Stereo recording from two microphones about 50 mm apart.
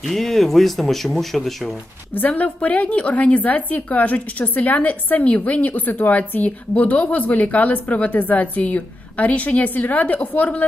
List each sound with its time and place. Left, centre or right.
0.0 s speech: centre
2.1 s a woman's voice: left